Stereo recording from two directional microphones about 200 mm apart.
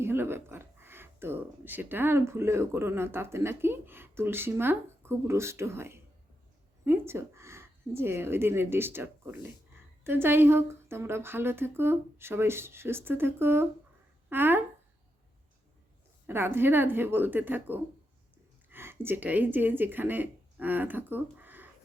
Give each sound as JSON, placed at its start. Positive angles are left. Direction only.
{"t": 0.0, "sound": "speech", "side_deg": -10}
{"t": 16.2, "sound": "speech", "side_deg": -10}